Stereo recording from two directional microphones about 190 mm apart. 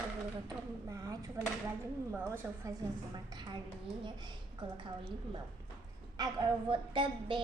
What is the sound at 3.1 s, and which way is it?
Speech, 20° right (ahead or behind).